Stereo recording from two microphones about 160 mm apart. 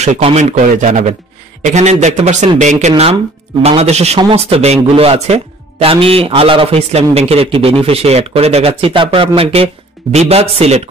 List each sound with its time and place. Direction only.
0.0 s a man's voice: 40° right (ahead or behind)